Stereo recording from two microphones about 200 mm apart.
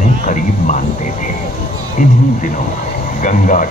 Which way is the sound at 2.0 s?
40° left (ahead or behind).